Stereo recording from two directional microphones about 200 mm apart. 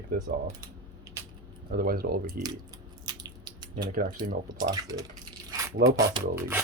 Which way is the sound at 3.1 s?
20° right (ahead or behind).